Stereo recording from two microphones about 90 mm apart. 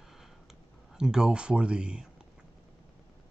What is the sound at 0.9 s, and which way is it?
Speech, 5° right (ahead or behind).